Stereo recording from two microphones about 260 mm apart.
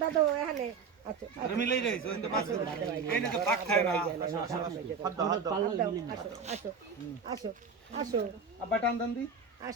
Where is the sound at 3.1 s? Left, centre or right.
Centre.